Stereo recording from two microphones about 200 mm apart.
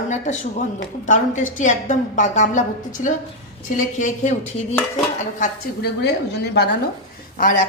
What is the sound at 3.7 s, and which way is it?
A woman's voice, 40° left (ahead or behind).